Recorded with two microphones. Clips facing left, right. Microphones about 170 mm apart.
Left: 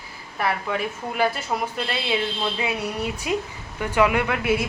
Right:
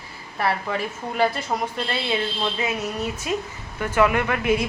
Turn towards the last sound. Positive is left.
turn(degrees=10)  # may be behind; listen again after turning